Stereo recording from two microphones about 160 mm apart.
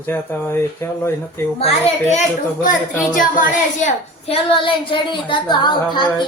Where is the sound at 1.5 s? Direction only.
40° left (ahead or behind).